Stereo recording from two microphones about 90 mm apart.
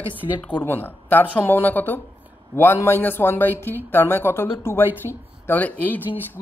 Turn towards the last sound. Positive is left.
turn(degrees=20)  # may be behind; listen again after turning